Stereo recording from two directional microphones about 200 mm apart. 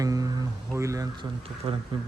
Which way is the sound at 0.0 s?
15° right (ahead or behind).